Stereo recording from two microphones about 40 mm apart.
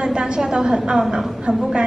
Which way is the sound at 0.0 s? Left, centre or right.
Right.